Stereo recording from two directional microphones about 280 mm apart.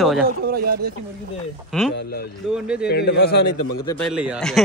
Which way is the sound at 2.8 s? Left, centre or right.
Left.